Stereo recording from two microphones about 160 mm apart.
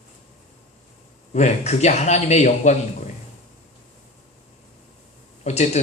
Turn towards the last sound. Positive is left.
turn(degrees=45)  # may be behind; listen again after turning